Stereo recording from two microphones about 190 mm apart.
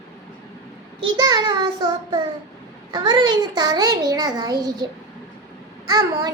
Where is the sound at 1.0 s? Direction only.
20° right (ahead or behind).